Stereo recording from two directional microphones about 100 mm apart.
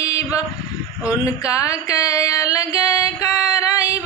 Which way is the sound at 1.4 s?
35° left (ahead or behind).